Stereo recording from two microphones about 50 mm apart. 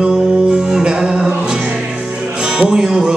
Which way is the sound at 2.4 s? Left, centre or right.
Centre.